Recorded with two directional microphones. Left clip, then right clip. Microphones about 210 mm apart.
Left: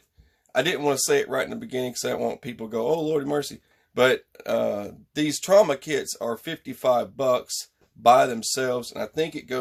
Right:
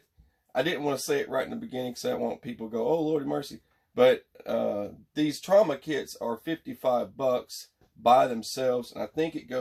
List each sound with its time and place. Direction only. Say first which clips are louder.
0.5 s speech: left 5 dB; 50° left (ahead or behind)